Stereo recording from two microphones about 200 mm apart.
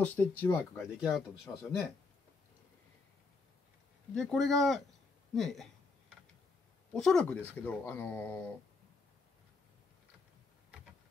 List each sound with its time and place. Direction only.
0.0 s speech: 10° left (ahead or behind)
1.0 s speech: centre (ahead or behind)
4.1 s speech: 5° left (ahead or behind)
5.3 s a sound: centre (ahead or behind)
6.9 s speech: centre (ahead or behind)